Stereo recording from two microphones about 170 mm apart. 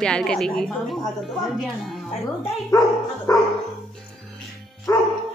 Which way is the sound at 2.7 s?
20° left (ahead or behind).